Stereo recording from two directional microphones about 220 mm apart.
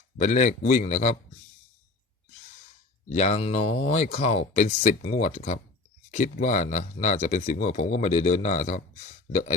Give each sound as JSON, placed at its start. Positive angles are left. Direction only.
{"t": 0.2, "sound": "speech", "side_deg": 35}
{"t": 3.1, "sound": "speech", "side_deg": 30}